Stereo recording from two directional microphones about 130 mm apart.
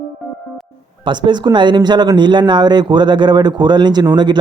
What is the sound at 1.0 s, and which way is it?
Speech, 35° right (ahead or behind).